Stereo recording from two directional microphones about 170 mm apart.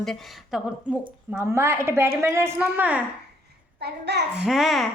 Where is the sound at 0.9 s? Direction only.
5° right (ahead or behind).